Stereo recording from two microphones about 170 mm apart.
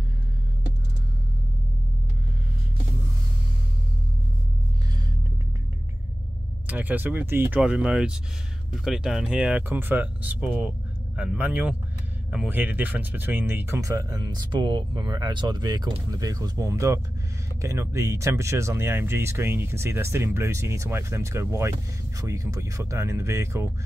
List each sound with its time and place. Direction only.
6.7 s speech: 10° right (ahead or behind)